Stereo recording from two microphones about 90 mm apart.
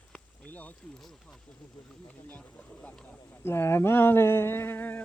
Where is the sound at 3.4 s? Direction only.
30° left (ahead or behind).